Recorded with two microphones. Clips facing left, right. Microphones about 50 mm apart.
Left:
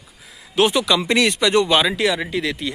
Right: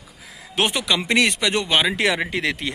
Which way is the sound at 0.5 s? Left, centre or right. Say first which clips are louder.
Left 5 dB; right.